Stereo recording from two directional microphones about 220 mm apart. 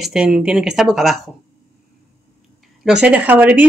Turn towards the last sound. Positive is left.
turn(degrees=-5)  # may be behind; listen again after turning